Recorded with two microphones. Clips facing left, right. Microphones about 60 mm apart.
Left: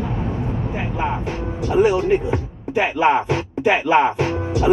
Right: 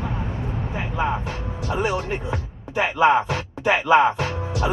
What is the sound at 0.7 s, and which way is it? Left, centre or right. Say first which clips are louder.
Vehicle: right 1 dB; left.